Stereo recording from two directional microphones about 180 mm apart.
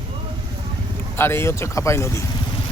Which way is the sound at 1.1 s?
15° left (ahead or behind).